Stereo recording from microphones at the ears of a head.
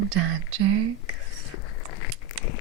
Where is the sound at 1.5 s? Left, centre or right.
Left.